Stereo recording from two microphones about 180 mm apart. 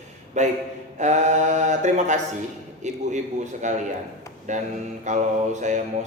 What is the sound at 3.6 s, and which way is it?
Mantra, 40° right (ahead or behind).